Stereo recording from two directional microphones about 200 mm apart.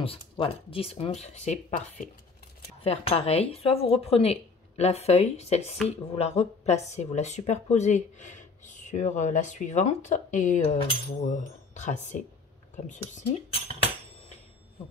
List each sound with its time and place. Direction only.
0.0 s speech: 25° left (ahead or behind)